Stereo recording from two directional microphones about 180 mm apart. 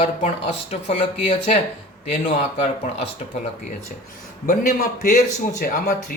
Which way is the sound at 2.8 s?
45° left (ahead or behind).